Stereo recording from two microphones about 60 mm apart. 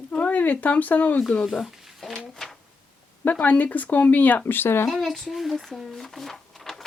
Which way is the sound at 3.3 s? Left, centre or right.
Left.